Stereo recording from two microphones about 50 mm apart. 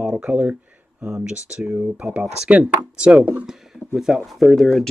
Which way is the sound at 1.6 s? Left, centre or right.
Right.